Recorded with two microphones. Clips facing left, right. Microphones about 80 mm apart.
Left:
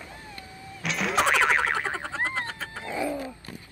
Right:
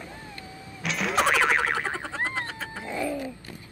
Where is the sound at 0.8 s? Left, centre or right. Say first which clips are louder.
Even; centre.